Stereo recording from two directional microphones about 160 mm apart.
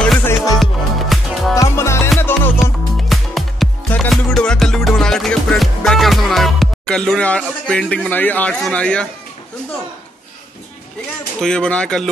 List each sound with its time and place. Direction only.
0.0 s music: 5° left (ahead or behind)
1.5 s music: 20° left (ahead or behind)
2.6 s music: centre (ahead or behind)
11.4 s speech: 5° left (ahead or behind)